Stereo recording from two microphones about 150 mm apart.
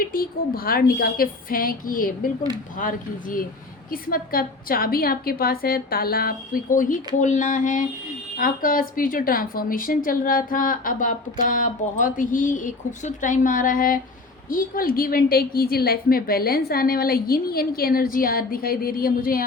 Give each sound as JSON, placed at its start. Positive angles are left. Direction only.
{"t": 0.0, "sound": "a woman's voice", "side_deg": 75}
{"t": 8.4, "sound": "a woman's voice", "side_deg": 70}